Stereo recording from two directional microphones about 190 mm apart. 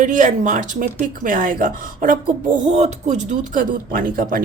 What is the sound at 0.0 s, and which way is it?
A woman's voice, 40° right (ahead or behind).